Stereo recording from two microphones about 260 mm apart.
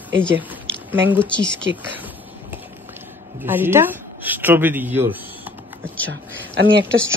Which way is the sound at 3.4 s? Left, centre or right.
Centre.